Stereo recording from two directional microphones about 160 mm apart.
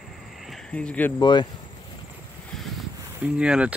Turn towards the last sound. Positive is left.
turn(degrees=-5)  # may be behind; listen again after turning